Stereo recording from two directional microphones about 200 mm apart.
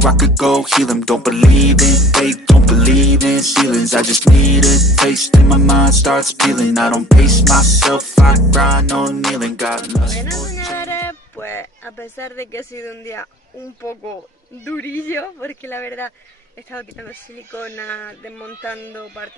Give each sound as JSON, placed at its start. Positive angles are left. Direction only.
{"t": 0.0, "sound": "music", "side_deg": 0}
{"t": 10.8, "sound": "speech", "side_deg": 10}
{"t": 17.5, "sound": "speech", "side_deg": 10}